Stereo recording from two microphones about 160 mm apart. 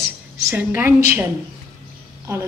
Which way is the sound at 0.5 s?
10° right (ahead or behind).